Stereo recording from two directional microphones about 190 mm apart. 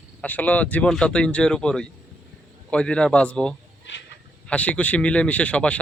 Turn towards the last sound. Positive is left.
turn(degrees=5)  # may be behind; listen again after turning